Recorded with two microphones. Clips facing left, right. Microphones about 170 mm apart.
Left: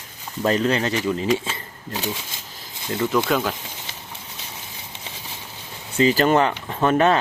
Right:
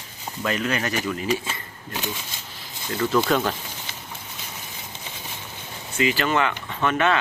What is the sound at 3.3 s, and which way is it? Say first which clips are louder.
Speech: even; centre (ahead or behind).